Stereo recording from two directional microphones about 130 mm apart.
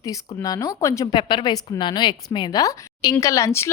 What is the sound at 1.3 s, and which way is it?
A woman's voice, 35° left (ahead or behind).